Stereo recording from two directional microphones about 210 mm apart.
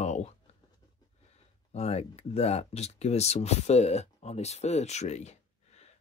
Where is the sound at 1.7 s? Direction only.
30° left (ahead or behind).